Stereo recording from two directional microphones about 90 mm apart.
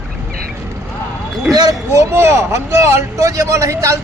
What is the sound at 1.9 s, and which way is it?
A man's voice, 30° right (ahead or behind).